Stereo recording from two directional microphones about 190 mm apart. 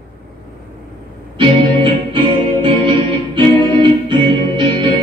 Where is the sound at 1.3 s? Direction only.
25° right (ahead or behind).